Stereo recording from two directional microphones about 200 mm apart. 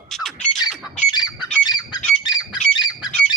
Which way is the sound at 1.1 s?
20° left (ahead or behind).